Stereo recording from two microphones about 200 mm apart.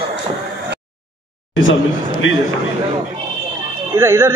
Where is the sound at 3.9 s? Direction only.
10° right (ahead or behind).